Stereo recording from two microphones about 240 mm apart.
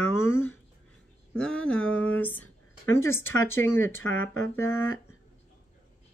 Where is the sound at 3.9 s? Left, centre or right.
Left.